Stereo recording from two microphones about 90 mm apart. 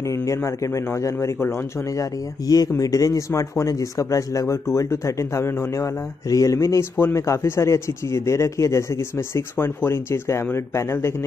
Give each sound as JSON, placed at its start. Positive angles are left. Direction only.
{"t": 1.0, "sound": "a man's voice", "side_deg": 35}